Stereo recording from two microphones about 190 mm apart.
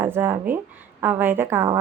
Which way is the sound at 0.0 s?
10° right (ahead or behind).